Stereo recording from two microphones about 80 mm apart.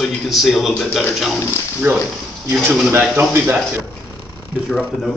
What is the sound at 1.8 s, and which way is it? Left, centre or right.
Speech, right.